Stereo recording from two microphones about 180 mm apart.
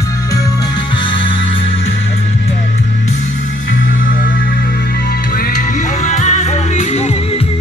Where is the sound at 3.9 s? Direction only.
50° left (ahead or behind).